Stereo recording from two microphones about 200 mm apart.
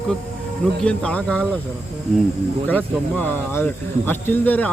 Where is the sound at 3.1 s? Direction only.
10° left (ahead or behind).